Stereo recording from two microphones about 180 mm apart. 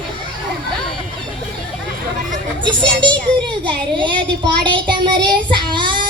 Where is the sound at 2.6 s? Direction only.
25° right (ahead or behind).